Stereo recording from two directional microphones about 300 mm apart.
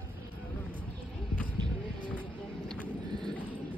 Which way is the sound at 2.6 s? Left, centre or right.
Centre.